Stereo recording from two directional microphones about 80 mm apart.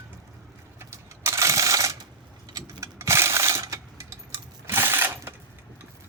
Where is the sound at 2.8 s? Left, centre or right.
Right.